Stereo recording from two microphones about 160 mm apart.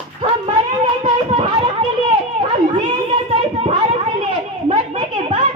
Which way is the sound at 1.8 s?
35° right (ahead or behind).